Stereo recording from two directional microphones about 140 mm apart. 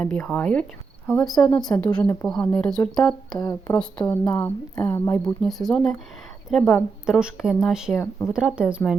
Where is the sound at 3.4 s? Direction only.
25° left (ahead or behind).